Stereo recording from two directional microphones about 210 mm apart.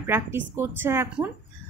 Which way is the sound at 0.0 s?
10° right (ahead or behind).